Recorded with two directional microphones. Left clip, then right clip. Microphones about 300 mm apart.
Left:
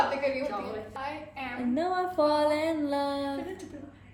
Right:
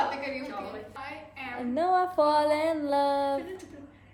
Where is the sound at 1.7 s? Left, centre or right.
Centre.